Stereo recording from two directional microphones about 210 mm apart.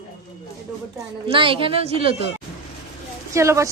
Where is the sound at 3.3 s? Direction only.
15° right (ahead or behind).